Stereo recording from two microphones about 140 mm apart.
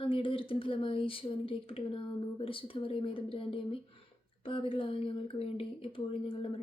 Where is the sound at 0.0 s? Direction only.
40° left (ahead or behind).